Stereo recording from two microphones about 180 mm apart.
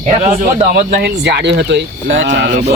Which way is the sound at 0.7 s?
60° right (ahead or behind).